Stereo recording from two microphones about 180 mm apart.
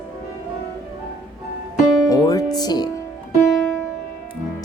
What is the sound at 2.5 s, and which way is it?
Speech, 20° left (ahead or behind).